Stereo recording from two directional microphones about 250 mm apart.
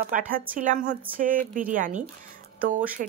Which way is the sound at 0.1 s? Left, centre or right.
Right.